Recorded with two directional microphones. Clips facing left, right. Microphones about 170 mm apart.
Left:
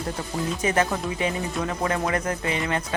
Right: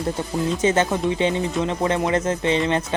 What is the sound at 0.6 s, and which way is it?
Speech, 25° right (ahead or behind).